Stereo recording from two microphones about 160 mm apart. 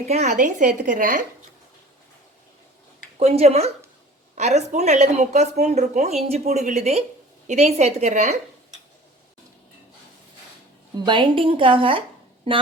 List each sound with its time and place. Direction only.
0.0 s a woman's voice: 45° right (ahead or behind)
3.2 s a woman's voice: 40° right (ahead or behind)
10.9 s a woman's voice: 30° right (ahead or behind)